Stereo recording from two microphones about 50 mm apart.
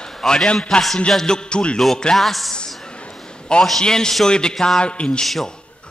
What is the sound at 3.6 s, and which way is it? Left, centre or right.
A man's voice, centre.